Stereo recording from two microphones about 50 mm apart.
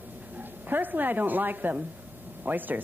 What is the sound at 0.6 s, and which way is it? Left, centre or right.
Speech, right.